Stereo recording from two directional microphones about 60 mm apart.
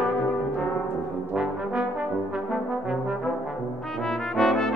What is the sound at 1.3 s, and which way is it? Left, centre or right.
Brass instrument, centre.